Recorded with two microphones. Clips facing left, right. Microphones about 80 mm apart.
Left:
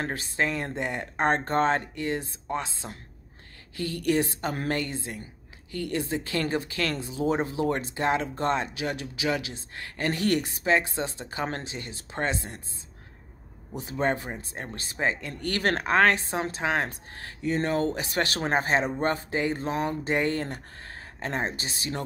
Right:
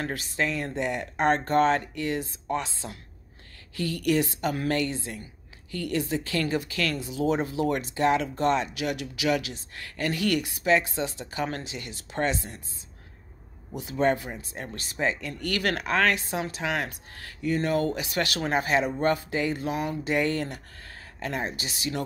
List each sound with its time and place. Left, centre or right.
0.0 s speech: left
13.7 s speech: left